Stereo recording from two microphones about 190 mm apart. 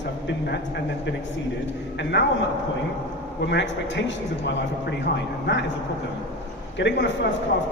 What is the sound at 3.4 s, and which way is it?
A man's voice, 65° left (ahead or behind).